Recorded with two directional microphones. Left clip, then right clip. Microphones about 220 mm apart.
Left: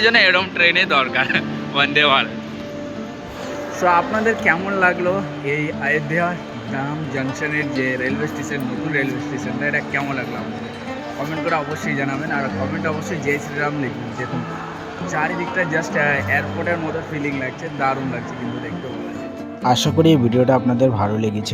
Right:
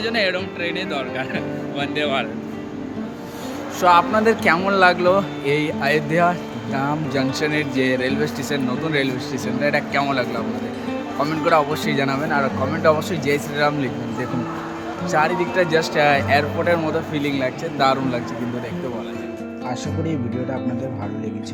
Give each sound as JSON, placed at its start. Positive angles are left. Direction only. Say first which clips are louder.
{"t": 0.0, "sound": "speech", "louder": "left 7 dB", "side_deg": -10}
{"t": 3.8, "sound": "speech", "louder": "right 2 dB", "side_deg": -10}
{"t": 11.4, "sound": "speech", "louder": "right 4 dB", "side_deg": -15}
{"t": 15.1, "sound": "speech", "louder": "right 3 dB", "side_deg": -10}
{"t": 19.6, "sound": "speech", "louder": "left 12 dB", "side_deg": 35}